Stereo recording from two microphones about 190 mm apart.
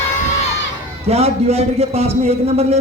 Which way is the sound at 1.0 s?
35° right (ahead or behind).